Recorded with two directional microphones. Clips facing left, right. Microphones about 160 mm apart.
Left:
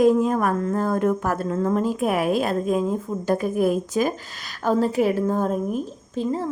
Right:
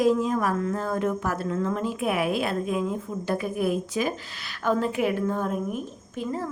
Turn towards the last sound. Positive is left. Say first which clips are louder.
# left 5 dB
turn(degrees=30)  # may be behind; listen again after turning